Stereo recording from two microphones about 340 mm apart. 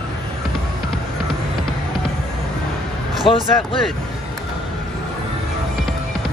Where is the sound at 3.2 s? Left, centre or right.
Centre.